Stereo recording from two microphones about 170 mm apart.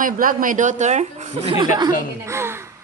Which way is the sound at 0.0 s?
55° right (ahead or behind).